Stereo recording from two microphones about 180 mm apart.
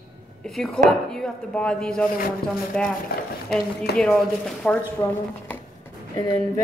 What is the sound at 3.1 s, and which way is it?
Speech, 55° left (ahead or behind).